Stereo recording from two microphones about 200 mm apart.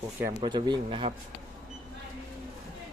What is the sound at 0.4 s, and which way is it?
Speech, 20° right (ahead or behind).